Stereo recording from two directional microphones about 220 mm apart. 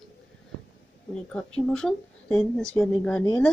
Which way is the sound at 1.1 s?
5° left (ahead or behind).